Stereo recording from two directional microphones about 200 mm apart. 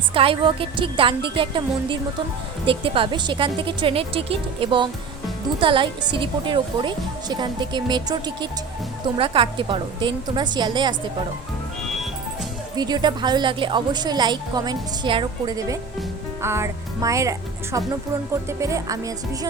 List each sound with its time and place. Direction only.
0.1 s a woman's voice: 25° right (ahead or behind)
12.7 s a woman's voice: 20° right (ahead or behind)